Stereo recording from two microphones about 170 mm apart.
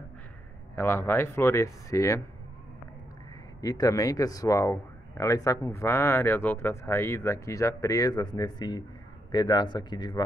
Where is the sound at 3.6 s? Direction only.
20° left (ahead or behind).